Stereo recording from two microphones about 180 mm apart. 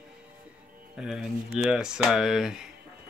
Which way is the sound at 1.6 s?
5° right (ahead or behind).